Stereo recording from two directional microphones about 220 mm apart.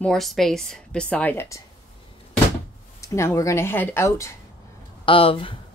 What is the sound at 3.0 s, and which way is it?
Speech, 15° left (ahead or behind).